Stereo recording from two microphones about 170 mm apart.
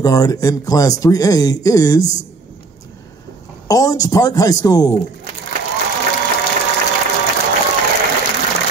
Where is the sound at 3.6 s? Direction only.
20° left (ahead or behind).